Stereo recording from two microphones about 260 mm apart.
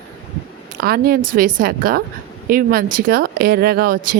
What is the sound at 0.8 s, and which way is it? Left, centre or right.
Speech, right.